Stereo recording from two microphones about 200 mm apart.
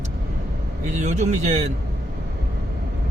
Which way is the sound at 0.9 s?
35° right (ahead or behind).